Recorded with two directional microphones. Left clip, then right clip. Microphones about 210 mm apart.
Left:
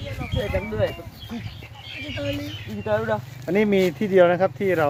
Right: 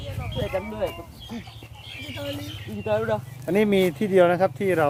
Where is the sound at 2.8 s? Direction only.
30° right (ahead or behind).